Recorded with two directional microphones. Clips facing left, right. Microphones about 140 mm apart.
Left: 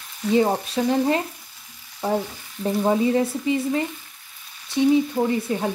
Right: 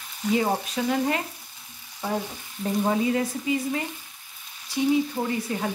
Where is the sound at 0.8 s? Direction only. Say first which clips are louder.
Left 6 dB; 25° left (ahead or behind).